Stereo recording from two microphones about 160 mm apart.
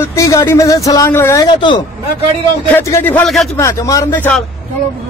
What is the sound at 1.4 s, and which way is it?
Speech, 30° left (ahead or behind).